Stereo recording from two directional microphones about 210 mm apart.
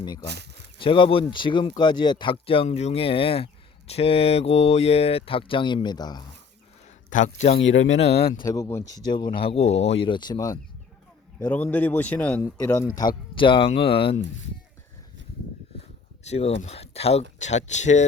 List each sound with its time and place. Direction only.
0.8 s speech: 25° left (ahead or behind)
7.1 s speech: 35° left (ahead or behind)
7.6 s speech: 65° left (ahead or behind)
8.1 s speech: 50° left (ahead or behind)
8.4 s a man's voice: 15° left (ahead or behind)
13.0 s speech: 20° left (ahead or behind)
16.2 s speech: 30° left (ahead or behind)